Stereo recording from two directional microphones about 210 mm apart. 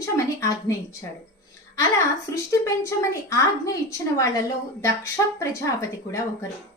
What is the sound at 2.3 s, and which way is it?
A woman's voice, 15° left (ahead or behind).